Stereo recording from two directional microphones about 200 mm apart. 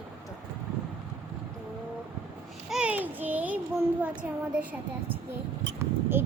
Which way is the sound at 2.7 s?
5° right (ahead or behind).